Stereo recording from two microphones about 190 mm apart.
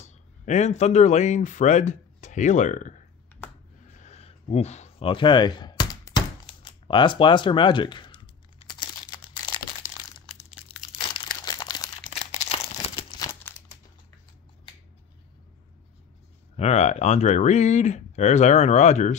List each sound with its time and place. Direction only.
0.0 s speech: 35° left (ahead or behind)
4.0 s a sound: 35° left (ahead or behind)
8.7 s crumpling: 25° left (ahead or behind)
16.5 s speech: 35° left (ahead or behind)